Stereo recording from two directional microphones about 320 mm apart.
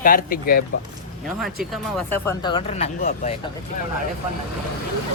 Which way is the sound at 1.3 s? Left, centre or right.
Centre.